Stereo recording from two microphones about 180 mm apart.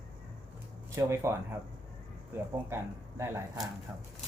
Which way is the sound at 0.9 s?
15° right (ahead or behind).